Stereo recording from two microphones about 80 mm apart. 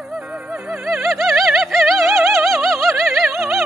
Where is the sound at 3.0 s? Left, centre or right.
Centre.